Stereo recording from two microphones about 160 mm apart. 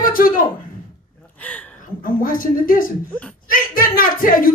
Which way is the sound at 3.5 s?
60° left (ahead or behind).